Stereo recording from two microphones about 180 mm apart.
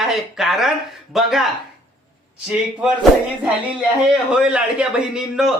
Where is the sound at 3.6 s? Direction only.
5° right (ahead or behind).